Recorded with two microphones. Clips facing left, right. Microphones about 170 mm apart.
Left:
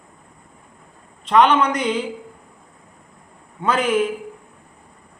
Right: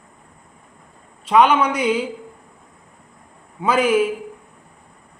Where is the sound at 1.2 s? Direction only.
10° right (ahead or behind).